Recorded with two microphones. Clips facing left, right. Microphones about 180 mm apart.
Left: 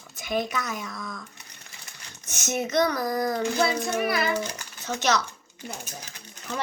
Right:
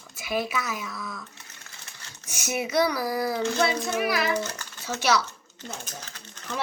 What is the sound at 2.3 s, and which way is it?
Speech, 10° right (ahead or behind).